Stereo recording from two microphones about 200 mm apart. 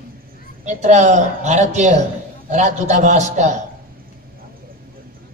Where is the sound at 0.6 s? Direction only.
35° right (ahead or behind).